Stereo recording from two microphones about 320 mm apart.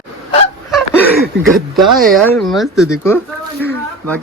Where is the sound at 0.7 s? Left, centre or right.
Centre.